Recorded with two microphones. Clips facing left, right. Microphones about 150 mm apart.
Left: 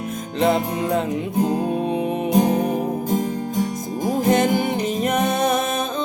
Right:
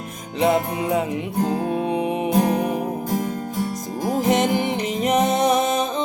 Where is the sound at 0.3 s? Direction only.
10° right (ahead or behind).